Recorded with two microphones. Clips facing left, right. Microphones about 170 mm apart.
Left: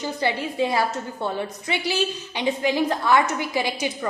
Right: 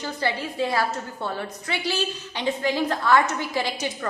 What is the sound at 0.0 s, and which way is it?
A woman's voice, 15° left (ahead or behind).